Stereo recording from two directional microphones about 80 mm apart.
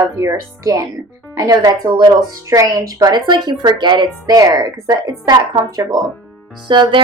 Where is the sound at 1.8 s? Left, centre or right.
Right.